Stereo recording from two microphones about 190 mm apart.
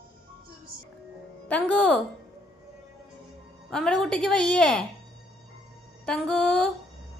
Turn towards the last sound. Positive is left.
turn(degrees=5)  # may be behind; listen again after turning